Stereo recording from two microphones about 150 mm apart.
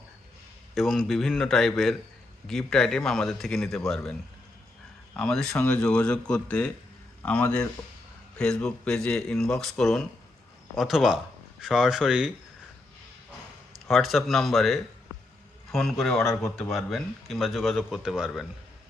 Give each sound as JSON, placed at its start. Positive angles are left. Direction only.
{"t": 0.7, "sound": "speech", "side_deg": 0}
{"t": 5.1, "sound": "speech", "side_deg": 5}
{"t": 13.8, "sound": "speech", "side_deg": 0}
{"t": 16.2, "sound": "speech", "side_deg": 15}
{"t": 16.7, "sound": "speech", "side_deg": 0}